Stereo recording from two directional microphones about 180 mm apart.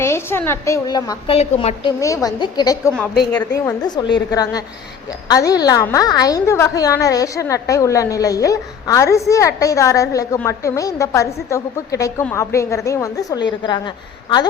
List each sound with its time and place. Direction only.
0.0 s a woman's voice: 15° left (ahead or behind); by 1.9 s 30° left (ahead or behind)
2.0 s a woman's voice: 15° left (ahead or behind)